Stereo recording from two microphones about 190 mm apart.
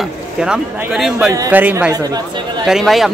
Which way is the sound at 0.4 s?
5° right (ahead or behind).